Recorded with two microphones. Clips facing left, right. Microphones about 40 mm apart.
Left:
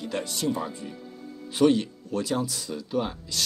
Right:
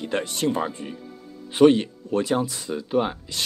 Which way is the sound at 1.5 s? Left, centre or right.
Right.